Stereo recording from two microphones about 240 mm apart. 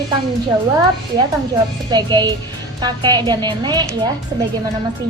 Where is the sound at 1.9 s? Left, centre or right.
Centre.